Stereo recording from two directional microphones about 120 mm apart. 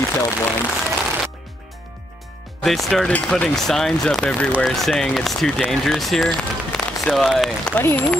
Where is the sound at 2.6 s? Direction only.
Centre (ahead or behind).